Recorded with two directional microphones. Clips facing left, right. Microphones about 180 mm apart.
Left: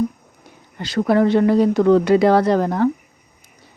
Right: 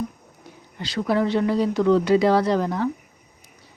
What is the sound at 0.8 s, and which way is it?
A woman's voice, 55° left (ahead or behind).